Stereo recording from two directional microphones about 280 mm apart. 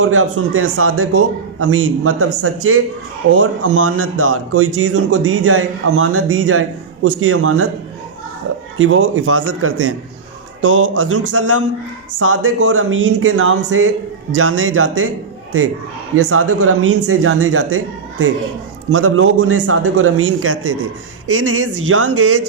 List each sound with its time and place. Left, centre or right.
0.0 s speech: right
8.8 s speech: right
16.1 s speech: right